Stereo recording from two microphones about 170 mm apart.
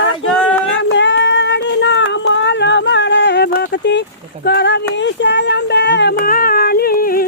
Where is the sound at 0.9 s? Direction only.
90° left; by 7.3 s 60° left (ahead or behind).